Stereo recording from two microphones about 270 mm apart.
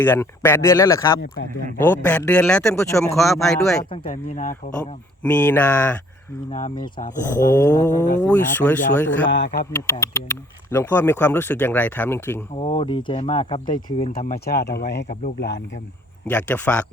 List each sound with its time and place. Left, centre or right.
0.0 s speech: centre
3.8 s speech: left
5.2 s speech: centre
6.5 s speech: left
7.5 s speech: centre
9.3 s speech: left
9.7 s speech: centre
12.5 s speech: left
13.7 s speech: left
16.2 s speech: centre